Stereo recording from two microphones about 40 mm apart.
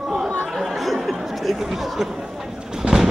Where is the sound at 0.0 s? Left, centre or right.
Centre.